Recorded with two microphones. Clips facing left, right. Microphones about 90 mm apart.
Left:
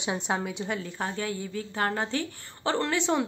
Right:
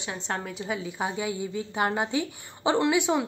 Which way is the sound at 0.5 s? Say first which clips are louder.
Right 1 dB; 5° right (ahead or behind).